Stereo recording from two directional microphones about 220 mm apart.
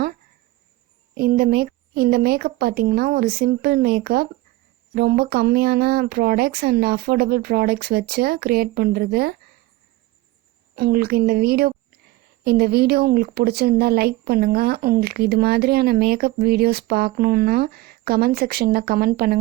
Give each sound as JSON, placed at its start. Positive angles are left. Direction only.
{"t": 1.1, "sound": "speech", "side_deg": -45}
{"t": 10.8, "sound": "a woman's voice", "side_deg": -45}